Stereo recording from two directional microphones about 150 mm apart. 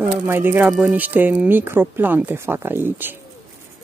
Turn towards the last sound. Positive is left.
turn(degrees=-15)  # may be behind; listen again after turning